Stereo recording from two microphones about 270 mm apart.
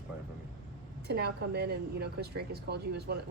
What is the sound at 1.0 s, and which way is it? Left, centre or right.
A woman's voice, right.